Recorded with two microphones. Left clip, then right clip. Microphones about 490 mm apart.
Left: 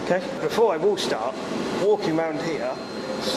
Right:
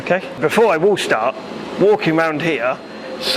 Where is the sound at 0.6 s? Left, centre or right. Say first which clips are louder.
Right 6 dB; right.